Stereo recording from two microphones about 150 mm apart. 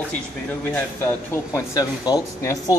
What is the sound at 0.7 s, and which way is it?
A man's voice, 15° left (ahead or behind).